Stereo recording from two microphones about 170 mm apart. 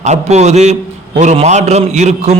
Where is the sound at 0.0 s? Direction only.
40° right (ahead or behind).